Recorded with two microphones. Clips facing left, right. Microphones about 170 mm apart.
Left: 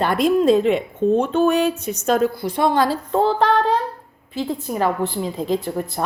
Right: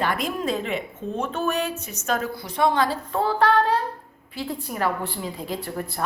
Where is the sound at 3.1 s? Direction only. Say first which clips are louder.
Left 3 dB; 25° left (ahead or behind).